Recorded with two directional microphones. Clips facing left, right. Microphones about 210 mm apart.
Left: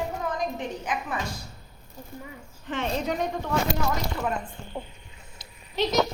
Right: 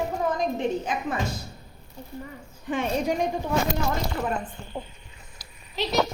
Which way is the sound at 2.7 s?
10° right (ahead or behind).